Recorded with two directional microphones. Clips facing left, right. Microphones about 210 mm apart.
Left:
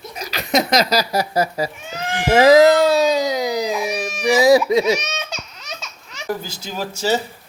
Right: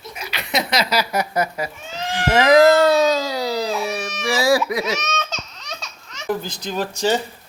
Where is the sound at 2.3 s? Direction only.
20° left (ahead or behind).